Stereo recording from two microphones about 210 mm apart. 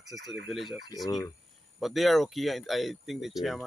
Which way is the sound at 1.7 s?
Centre (ahead or behind).